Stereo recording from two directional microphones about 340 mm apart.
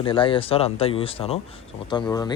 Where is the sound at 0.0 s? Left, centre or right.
Centre.